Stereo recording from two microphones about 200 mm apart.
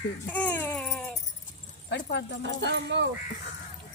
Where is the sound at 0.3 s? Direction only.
10° left (ahead or behind).